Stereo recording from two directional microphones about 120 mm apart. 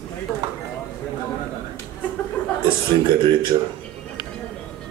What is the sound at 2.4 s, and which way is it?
Chuckle, 10° left (ahead or behind).